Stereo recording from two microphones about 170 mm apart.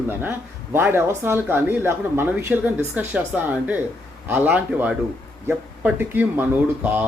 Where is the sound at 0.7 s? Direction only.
15° right (ahead or behind).